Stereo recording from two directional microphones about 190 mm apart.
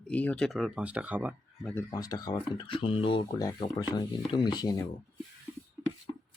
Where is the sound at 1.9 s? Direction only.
20° left (ahead or behind).